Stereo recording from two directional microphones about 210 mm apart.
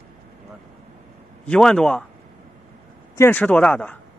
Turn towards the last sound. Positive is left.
turn(degrees=5)  # may be behind; listen again after turning